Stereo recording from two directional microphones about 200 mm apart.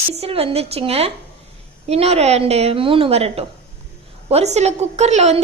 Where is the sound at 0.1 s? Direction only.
30° right (ahead or behind).